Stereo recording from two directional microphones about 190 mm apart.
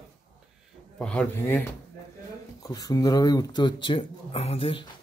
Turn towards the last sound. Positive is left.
turn(degrees=30)  # may be behind; listen again after turning